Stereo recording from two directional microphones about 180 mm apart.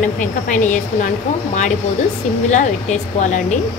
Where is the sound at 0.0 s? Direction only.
45° left (ahead or behind).